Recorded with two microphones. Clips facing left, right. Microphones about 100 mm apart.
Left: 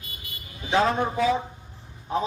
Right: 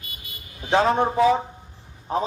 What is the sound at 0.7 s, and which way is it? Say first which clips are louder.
Speech: right 3 dB; 35° right (ahead or behind).